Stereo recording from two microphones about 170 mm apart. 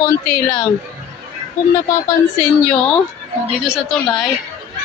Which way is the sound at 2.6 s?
5° left (ahead or behind).